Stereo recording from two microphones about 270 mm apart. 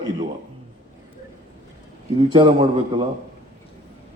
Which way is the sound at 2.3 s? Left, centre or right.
Centre.